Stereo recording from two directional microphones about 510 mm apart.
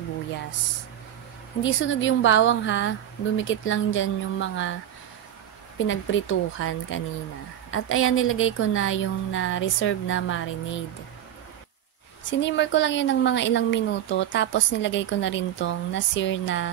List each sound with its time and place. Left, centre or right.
1.6 s a woman's voice: left
5.8 s a woman's voice: left
12.3 s a woman's voice: left